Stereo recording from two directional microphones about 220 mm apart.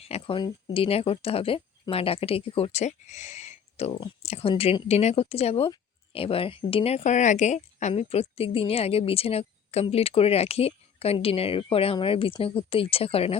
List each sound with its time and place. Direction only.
0.0 s speech: 25° left (ahead or behind)